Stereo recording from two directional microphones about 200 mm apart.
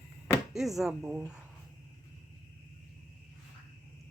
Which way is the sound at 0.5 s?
Centre (ahead or behind).